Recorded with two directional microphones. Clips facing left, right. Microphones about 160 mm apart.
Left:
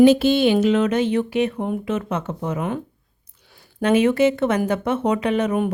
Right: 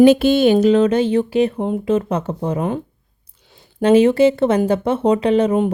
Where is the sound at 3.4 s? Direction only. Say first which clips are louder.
Right 5 dB; 20° right (ahead or behind).